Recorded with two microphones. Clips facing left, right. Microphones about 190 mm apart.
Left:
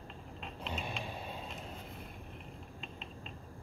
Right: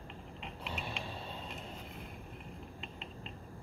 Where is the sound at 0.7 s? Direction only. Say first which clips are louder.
Left 2 dB; 15° left (ahead or behind).